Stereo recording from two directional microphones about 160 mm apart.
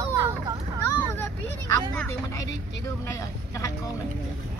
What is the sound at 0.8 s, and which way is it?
Vehicle, 15° left (ahead or behind).